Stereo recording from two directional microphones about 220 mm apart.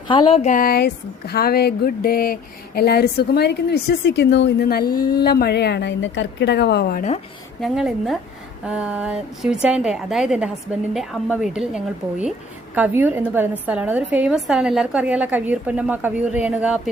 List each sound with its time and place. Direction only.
0.1 s speech: 25° left (ahead or behind); by 7.0 s 45° left (ahead or behind)
7.6 s a woman's voice: centre (ahead or behind)